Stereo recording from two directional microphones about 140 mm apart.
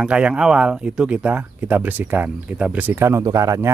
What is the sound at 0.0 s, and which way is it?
Speech, 10° right (ahead or behind).